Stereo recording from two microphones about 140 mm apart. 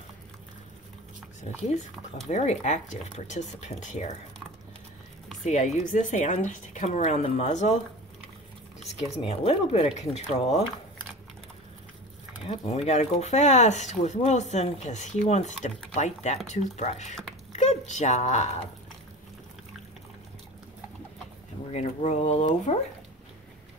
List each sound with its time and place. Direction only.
2.2 s speech: 55° left (ahead or behind)
5.4 s speech: 55° left (ahead or behind)
8.8 s speech: 50° left (ahead or behind)
12.4 s speech: 50° left (ahead or behind)
21.7 s speech: 55° left (ahead or behind)